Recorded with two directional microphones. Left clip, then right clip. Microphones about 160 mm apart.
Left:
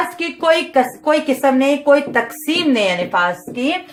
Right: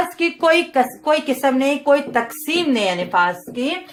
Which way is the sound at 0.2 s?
40° right (ahead or behind).